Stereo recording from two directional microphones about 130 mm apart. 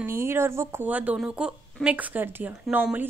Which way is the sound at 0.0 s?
20° right (ahead or behind).